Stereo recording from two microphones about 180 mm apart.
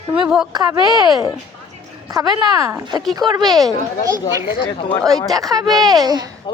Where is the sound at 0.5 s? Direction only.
20° right (ahead or behind).